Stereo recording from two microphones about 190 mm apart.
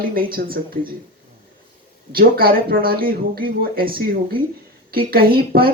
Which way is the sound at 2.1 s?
50° right (ahead or behind).